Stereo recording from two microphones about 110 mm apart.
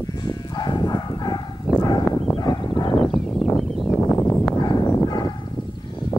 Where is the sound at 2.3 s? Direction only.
45° left (ahead or behind).